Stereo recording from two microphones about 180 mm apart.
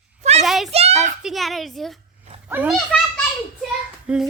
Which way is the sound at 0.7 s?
35° right (ahead or behind).